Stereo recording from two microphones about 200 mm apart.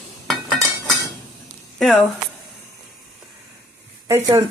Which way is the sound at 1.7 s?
Centre (ahead or behind).